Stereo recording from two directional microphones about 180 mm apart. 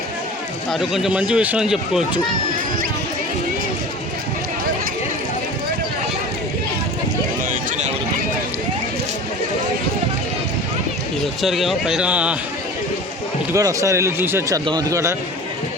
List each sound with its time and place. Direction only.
0.7 s speech: centre (ahead or behind)
7.5 s a sound: 40° right (ahead or behind)
11.4 s speech: centre (ahead or behind)
13.5 s speech: 20° right (ahead or behind)